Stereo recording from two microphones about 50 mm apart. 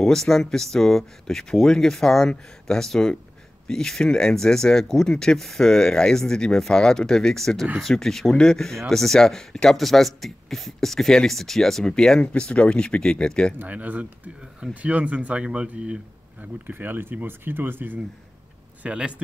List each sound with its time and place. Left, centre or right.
0.0 s speech: centre
13.6 s speech: right
16.3 s speech: right
18.8 s speech: right